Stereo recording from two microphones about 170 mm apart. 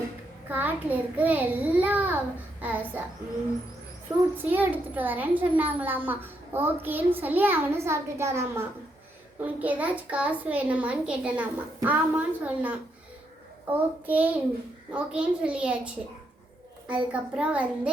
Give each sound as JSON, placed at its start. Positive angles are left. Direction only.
{"t": 0.4, "sound": "a child's voice", "side_deg": -10}
{"t": 4.1, "sound": "a child's voice", "side_deg": -20}
{"t": 4.4, "sound": "a child's voice", "side_deg": -10}
{"t": 17.1, "sound": "a child's voice", "side_deg": -5}